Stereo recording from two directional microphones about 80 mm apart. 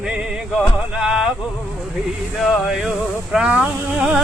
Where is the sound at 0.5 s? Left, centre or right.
Centre.